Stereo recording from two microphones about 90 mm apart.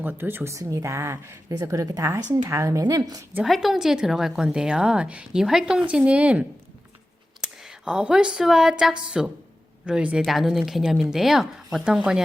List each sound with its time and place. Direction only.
0.0 s speech: 25° right (ahead or behind)
1.5 s speech: 40° right (ahead or behind)
3.4 s a woman's voice: centre (ahead or behind)
7.4 s a woman's voice: 10° right (ahead or behind)
10.2 s a woman's voice: centre (ahead or behind)